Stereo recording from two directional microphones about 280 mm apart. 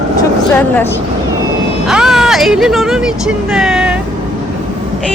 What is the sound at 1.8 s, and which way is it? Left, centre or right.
Vehicle, centre.